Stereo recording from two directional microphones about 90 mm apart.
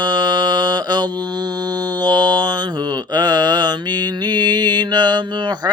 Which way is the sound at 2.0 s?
50° right (ahead or behind).